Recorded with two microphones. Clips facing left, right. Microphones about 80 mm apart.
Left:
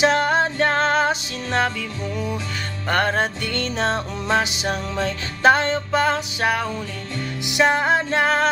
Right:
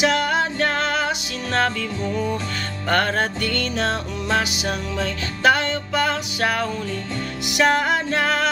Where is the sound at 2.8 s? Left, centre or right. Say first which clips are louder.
Even; centre.